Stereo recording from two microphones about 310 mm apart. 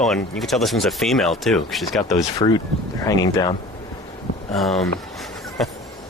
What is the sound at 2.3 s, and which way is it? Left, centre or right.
Speech, centre.